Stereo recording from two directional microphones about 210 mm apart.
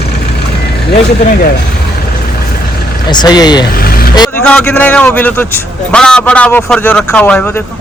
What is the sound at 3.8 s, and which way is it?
Vehicle, 45° left (ahead or behind).